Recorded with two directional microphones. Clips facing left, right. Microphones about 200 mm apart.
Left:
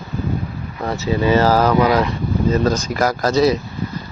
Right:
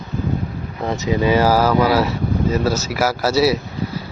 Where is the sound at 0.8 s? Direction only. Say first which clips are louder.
Even; 15° right (ahead or behind).